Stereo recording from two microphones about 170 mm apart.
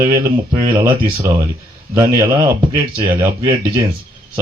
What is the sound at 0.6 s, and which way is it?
Speech, 15° right (ahead or behind).